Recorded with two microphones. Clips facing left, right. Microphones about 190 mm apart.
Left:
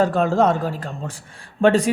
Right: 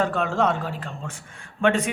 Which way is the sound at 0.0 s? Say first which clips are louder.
Left 5 dB; 40° left (ahead or behind).